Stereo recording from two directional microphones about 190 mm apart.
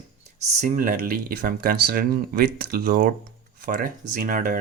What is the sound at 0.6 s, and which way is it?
Speech, 45° right (ahead or behind).